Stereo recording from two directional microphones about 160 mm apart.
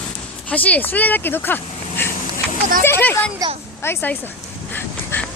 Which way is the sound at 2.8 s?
15° left (ahead or behind).